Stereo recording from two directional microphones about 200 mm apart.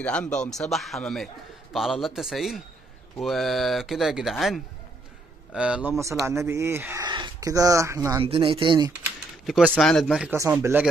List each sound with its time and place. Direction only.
0.0 s a man's voice: 5° left (ahead or behind); by 8.2 s 15° right (ahead or behind)
8.2 s speech: 25° right (ahead or behind)
9.5 s a man's voice: 5° right (ahead or behind)
10.3 s speech: 15° right (ahead or behind)